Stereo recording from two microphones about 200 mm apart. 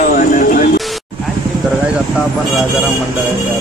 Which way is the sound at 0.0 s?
40° left (ahead or behind).